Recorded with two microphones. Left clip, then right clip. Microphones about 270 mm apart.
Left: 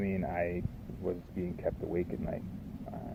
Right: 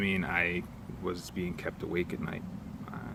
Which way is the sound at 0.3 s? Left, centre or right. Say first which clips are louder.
Right 4 dB; right.